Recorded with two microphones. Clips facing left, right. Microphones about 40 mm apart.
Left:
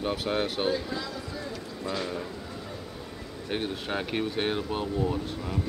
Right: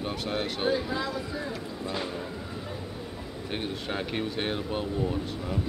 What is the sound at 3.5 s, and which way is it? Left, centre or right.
Speech, centre.